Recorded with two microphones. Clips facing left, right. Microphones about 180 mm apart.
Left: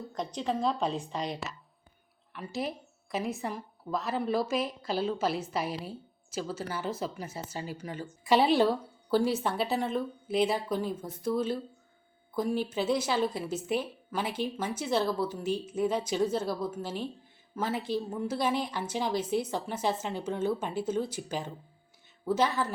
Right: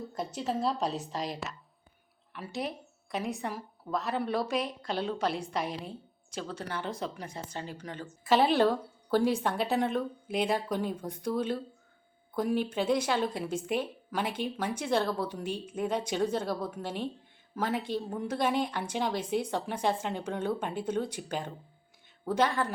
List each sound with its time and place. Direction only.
0.1 s a woman's voice: 5° right (ahead or behind)